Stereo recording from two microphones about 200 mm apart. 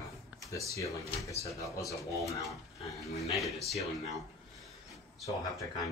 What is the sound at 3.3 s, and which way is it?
Speech, centre (ahead or behind).